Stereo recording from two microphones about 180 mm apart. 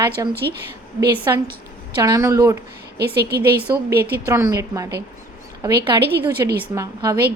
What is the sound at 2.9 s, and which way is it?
Speech, 65° right (ahead or behind).